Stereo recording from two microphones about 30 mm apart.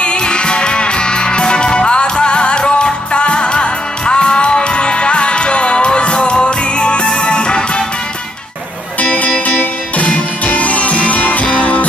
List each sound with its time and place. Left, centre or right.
0.0 s music: left
9.5 s music: left
10.0 s music: left